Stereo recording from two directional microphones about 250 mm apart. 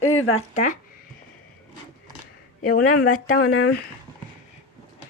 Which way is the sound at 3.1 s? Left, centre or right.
Left.